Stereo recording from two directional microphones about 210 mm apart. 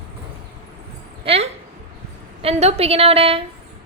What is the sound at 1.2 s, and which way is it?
Speech, 30° right (ahead or behind).